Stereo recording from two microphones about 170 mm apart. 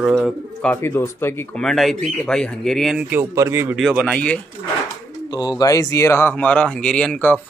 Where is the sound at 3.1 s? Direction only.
15° right (ahead or behind).